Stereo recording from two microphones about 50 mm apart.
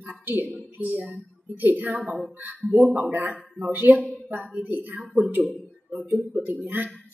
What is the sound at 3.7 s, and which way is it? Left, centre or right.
A woman's voice, right.